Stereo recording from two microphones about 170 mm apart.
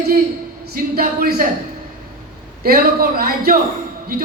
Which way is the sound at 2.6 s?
60° right (ahead or behind).